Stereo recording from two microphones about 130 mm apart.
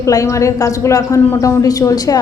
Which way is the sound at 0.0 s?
25° left (ahead or behind).